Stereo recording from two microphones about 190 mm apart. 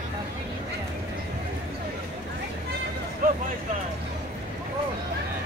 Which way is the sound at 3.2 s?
50° right (ahead or behind).